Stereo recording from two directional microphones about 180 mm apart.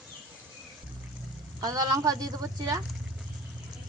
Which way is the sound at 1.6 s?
20° right (ahead or behind).